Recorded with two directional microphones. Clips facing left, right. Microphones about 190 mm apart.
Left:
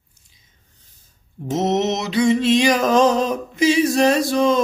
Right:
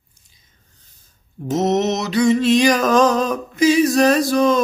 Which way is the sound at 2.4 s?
25° left (ahead or behind).